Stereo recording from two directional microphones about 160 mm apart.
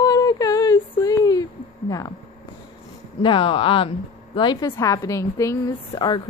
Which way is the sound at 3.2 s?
30° left (ahead or behind).